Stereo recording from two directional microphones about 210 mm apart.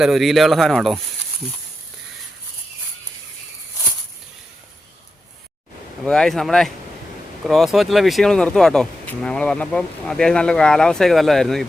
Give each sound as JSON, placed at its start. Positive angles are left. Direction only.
{"t": 0.0, "sound": "speech", "side_deg": 0}
{"t": 6.1, "sound": "speech", "side_deg": 0}